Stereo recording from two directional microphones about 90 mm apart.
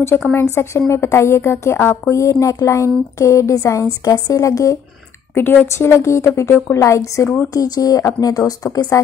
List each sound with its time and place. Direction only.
0.3 s speech: 25° left (ahead or behind)
5.3 s speech: 25° left (ahead or behind); by 8.9 s 45° left (ahead or behind)